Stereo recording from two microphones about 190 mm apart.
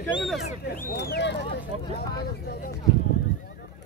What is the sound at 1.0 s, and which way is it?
Speech, 65° left (ahead or behind).